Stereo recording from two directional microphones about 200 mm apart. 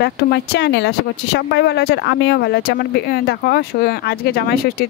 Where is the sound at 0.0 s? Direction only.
55° left (ahead or behind).